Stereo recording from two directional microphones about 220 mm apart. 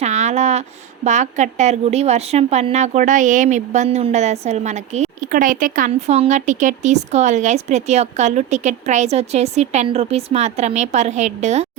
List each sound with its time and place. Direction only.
0.0 s a woman's voice: 30° right (ahead or behind)